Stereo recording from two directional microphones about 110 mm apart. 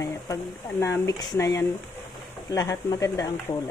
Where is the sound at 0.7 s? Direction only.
25° left (ahead or behind).